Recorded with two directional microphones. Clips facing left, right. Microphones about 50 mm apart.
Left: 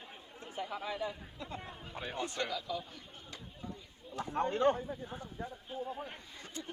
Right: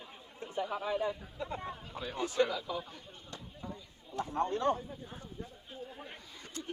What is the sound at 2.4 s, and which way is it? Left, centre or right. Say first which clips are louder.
Speech: right 10 dB; centre.